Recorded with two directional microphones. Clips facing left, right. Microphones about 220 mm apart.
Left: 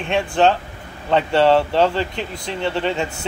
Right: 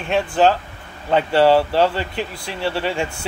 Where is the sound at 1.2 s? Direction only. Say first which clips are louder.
Right 1 dB; 25° left (ahead or behind).